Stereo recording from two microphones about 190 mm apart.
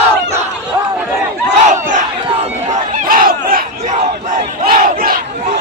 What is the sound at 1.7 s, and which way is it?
Battle cry, 40° right (ahead or behind).